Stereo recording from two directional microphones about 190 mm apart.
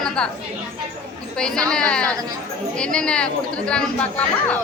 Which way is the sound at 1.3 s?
5° left (ahead or behind).